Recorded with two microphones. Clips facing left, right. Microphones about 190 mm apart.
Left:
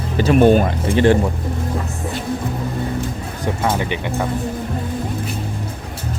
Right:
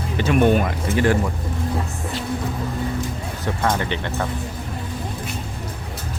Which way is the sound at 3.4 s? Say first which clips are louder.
Left 2 dB; 10° left (ahead or behind).